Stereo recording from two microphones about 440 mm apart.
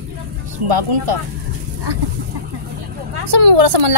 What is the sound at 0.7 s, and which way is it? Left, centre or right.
Speech, right.